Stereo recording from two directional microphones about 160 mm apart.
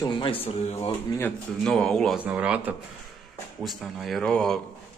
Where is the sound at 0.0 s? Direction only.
35° left (ahead or behind).